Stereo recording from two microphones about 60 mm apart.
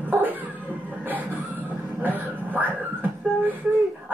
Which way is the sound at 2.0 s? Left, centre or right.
Right.